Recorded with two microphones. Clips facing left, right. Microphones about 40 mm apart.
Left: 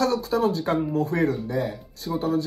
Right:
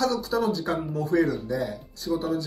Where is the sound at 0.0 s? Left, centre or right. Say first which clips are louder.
Left 2 dB; left.